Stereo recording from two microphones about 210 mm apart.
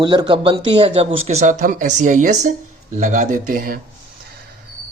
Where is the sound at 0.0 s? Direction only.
20° right (ahead or behind); by 3.8 s 40° right (ahead or behind).